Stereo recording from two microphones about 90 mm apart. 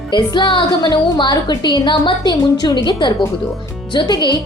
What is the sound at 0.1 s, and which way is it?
A woman's voice, 60° left (ahead or behind).